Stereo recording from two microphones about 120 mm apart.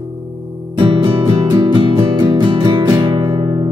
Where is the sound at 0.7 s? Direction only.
40° right (ahead or behind).